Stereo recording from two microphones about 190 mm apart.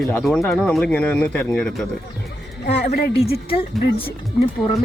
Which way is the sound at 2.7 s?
55° left (ahead or behind).